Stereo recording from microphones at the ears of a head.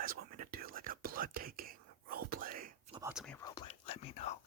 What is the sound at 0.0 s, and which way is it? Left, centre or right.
Whispering, right.